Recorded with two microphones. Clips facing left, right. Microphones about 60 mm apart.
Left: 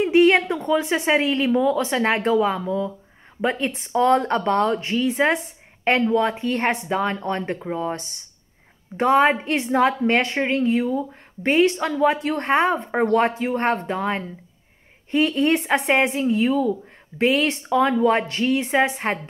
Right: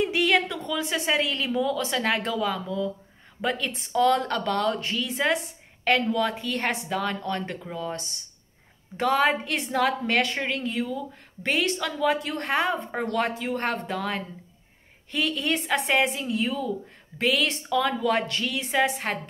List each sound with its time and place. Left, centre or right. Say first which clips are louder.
0.0 s a woman's voice: left 7 dB; left